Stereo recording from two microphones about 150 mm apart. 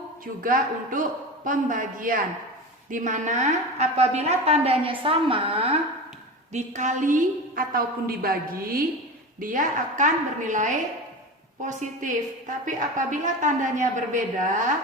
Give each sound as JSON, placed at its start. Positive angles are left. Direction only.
{"t": 0.4, "sound": "a woman's voice", "side_deg": -65}
{"t": 6.5, "sound": "a woman's voice", "side_deg": -55}
{"t": 9.4, "sound": "a woman's voice", "side_deg": -60}